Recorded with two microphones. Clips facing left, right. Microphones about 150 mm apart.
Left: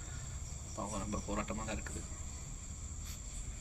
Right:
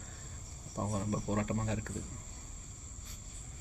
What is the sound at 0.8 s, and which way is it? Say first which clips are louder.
Speech: right 5 dB; 45° right (ahead or behind).